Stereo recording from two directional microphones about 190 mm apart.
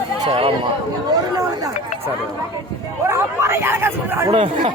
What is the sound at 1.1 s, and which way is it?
Chatter, 20° right (ahead or behind).